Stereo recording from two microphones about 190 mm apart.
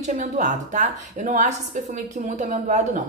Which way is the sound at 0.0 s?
40° right (ahead or behind).